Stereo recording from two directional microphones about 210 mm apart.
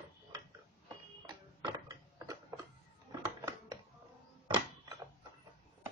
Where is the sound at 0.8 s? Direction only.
20° right (ahead or behind).